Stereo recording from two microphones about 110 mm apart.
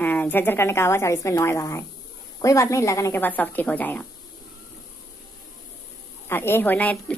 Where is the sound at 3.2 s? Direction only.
15° left (ahead or behind).